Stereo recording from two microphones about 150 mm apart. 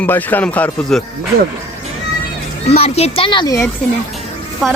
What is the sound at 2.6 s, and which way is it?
Speech, 45° left (ahead or behind).